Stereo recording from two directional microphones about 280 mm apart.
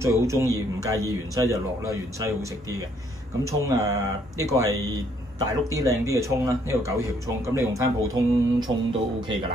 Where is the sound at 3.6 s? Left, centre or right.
Centre.